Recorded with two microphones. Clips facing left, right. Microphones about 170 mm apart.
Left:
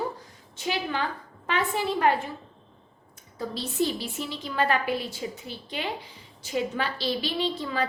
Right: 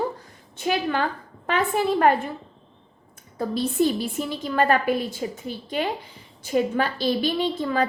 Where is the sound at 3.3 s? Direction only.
50° right (ahead or behind).